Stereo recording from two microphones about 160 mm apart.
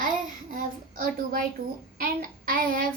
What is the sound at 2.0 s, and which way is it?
Child singing, 60° right (ahead or behind).